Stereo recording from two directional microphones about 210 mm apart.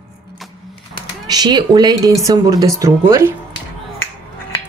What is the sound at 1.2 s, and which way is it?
Speech, 20° right (ahead or behind).